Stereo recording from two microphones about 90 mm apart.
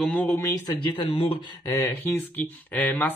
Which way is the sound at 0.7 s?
65° left (ahead or behind).